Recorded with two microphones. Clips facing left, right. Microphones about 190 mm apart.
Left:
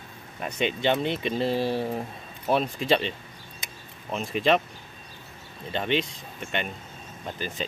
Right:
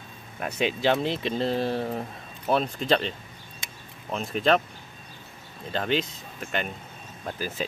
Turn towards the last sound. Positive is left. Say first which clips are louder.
# right 1 dB
turn(degrees=-5)  # may be behind; listen again after turning